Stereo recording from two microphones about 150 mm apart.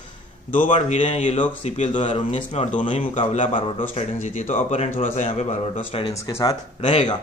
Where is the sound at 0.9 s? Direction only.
50° left (ahead or behind).